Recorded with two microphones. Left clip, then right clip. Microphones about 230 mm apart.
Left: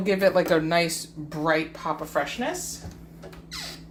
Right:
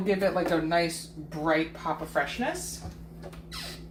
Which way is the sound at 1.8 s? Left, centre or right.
Left.